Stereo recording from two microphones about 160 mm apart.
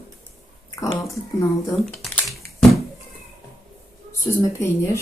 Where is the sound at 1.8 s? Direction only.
Centre (ahead or behind).